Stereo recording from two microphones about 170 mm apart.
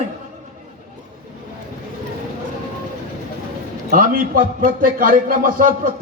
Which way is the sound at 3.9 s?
55° right (ahead or behind).